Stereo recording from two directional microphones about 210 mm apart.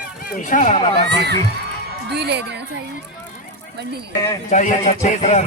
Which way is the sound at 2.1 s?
50° right (ahead or behind).